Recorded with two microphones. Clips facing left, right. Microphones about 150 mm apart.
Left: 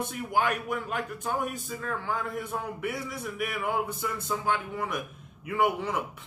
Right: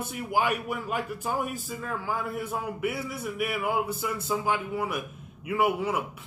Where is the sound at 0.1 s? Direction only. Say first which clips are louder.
Right 3 dB; 10° right (ahead or behind).